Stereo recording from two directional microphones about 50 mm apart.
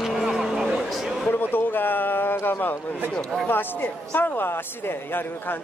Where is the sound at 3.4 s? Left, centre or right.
Left.